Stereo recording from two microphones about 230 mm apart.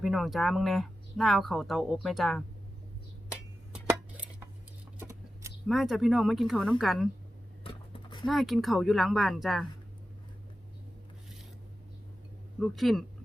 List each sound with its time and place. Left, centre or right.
0.0 s speech: centre
3.8 s a sound: centre
5.6 s speech: centre
7.6 s a sound: left
8.3 s speech: centre
12.5 s speech: centre